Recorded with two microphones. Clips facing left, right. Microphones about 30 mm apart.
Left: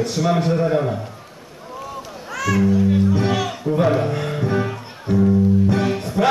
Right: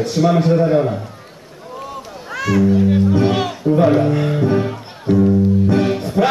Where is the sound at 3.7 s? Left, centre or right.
Centre.